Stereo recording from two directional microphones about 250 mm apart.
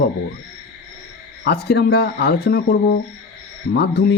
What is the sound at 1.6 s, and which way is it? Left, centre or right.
Speech, left.